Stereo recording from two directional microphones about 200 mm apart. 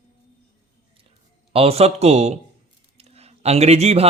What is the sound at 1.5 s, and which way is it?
Speech, 30° right (ahead or behind).